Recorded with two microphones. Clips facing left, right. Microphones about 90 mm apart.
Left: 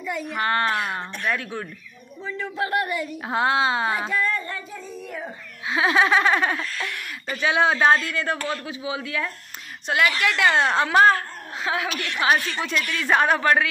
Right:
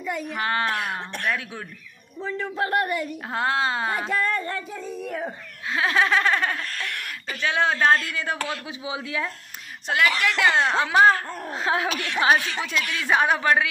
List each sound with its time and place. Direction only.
0.0 s a child's voice: 40° right (ahead or behind)
0.3 s a woman's voice: centre (ahead or behind)
2.5 s a woman's voice: 40° right (ahead or behind)
3.3 s a woman's voice: 5° left (ahead or behind)
4.1 s speech: 55° right (ahead or behind)
5.7 s laughter: 10° left (ahead or behind)
6.9 s speech: 65° right (ahead or behind)
7.3 s laughter: 10° left (ahead or behind)
8.1 s a woman's voice: 5° right (ahead or behind)
8.6 s speech: 20° right (ahead or behind)
9.8 s a woman's voice: centre (ahead or behind)
11.5 s a woman's voice: 35° right (ahead or behind)
12.7 s speech: 10° right (ahead or behind)